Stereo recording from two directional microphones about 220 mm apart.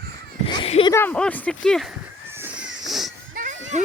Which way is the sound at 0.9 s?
5° left (ahead or behind).